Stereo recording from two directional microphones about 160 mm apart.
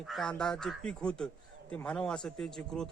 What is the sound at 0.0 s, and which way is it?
Speech, centre (ahead or behind).